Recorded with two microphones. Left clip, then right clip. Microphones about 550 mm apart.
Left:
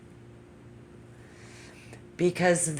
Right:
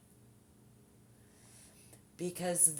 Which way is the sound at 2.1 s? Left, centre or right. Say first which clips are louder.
Left 13 dB; right.